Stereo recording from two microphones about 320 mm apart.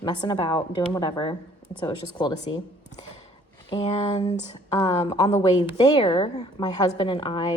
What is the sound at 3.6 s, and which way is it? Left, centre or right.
A woman's voice, centre.